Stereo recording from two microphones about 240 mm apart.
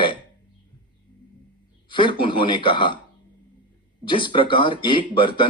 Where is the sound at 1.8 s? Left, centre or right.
Centre.